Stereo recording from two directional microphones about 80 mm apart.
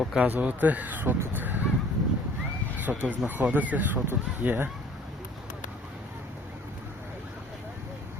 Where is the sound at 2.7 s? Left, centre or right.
Right.